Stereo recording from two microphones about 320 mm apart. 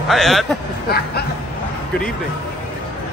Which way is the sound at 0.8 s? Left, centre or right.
Left.